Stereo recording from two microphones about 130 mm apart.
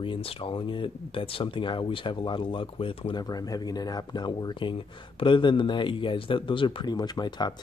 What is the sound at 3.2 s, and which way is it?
Speech, 30° left (ahead or behind).